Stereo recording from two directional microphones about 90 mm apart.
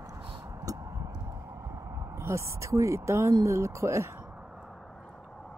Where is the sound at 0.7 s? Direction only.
45° right (ahead or behind).